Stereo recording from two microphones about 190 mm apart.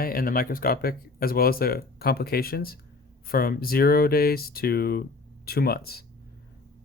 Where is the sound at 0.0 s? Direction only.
50° left (ahead or behind).